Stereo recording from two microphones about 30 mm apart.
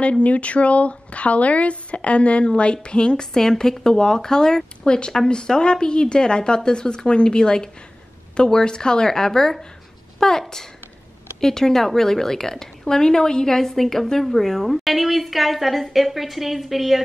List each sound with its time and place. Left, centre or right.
0.2 s a woman's voice: left
11.4 s a woman's voice: centre